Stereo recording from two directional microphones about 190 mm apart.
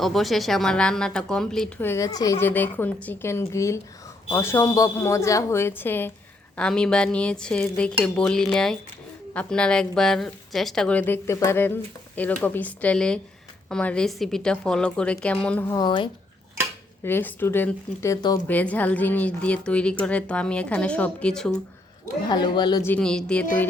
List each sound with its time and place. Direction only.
0.0 s a woman's voice: centre (ahead or behind)
15.7 s speech: 25° left (ahead or behind)
17.0 s a woman's voice: 10° left (ahead or behind)
18.4 s a woman's voice: 10° left (ahead or behind)
22.3 s speech: 25° left (ahead or behind)
22.8 s a woman's voice: 5° left (ahead or behind)